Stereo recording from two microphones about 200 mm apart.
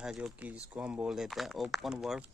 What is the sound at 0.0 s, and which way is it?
Speech, 5° right (ahead or behind).